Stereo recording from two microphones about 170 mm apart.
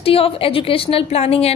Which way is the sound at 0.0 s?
35° left (ahead or behind).